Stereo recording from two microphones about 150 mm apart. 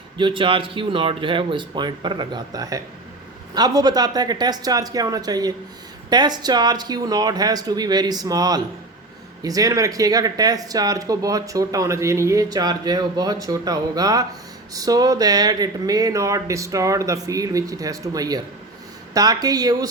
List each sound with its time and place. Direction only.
0.2 s speech: 35° right (ahead or behind)